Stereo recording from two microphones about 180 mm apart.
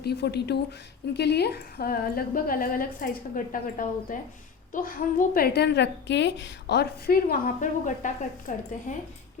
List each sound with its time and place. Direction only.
0.0 s a woman's voice: 65° left (ahead or behind); by 9.0 s 45° left (ahead or behind)